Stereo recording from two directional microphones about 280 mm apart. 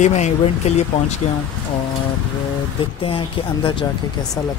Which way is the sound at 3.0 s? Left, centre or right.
Centre.